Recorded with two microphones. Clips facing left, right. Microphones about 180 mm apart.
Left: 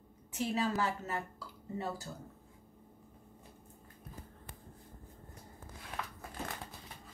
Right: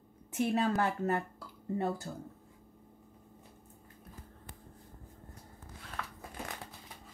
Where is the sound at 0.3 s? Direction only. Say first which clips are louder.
Right 4 dB; 55° right (ahead or behind).